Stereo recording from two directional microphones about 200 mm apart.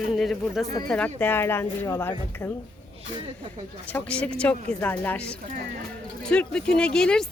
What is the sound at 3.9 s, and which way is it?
Speech, 5° left (ahead or behind).